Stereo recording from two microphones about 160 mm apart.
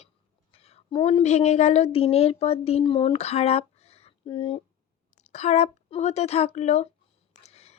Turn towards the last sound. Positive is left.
turn(degrees=40)  # may be behind; listen again after turning